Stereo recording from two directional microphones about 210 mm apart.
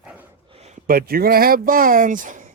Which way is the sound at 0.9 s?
45° right (ahead or behind).